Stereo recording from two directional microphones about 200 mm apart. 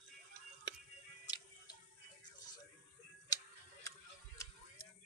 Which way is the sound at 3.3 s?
20° left (ahead or behind).